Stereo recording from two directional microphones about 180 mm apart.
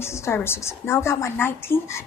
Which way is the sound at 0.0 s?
15° left (ahead or behind).